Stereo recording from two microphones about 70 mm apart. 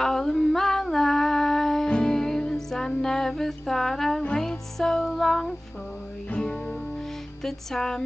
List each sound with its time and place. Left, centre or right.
0.0 s a sound: centre
1.9 s music: centre
6.3 s music: centre
7.4 s music: centre